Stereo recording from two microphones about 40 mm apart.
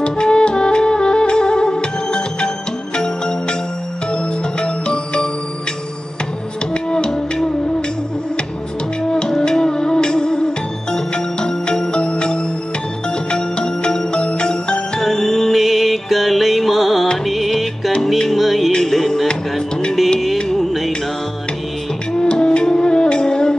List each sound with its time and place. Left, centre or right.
0.0 s music: left
6.7 s music: left
9.4 s music: centre
15.0 s music: centre
20.3 s music: centre
20.6 s music: centre
22.2 s music: left